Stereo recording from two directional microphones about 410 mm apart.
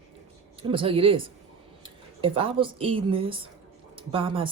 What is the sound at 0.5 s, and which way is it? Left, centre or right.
Speech, centre.